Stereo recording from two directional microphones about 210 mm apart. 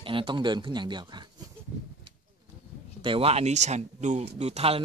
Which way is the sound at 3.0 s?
25° right (ahead or behind).